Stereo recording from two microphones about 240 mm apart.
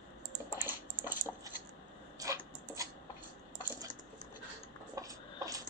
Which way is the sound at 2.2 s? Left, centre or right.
Centre.